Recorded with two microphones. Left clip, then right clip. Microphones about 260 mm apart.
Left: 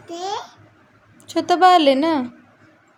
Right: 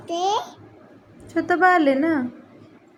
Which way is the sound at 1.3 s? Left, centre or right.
Left.